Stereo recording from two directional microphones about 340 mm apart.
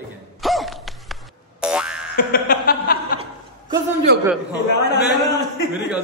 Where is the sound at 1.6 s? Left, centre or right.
Centre.